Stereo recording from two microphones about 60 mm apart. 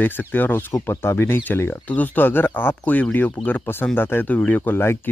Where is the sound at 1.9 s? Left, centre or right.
Left.